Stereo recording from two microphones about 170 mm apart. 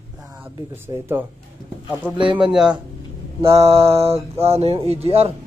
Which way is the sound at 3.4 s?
35° right (ahead or behind).